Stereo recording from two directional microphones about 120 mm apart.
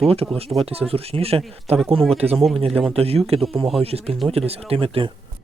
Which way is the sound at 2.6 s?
55° right (ahead or behind).